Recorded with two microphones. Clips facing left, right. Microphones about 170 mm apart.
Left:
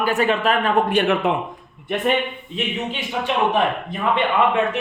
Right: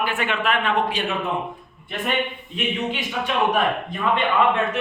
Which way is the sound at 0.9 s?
60° left (ahead or behind).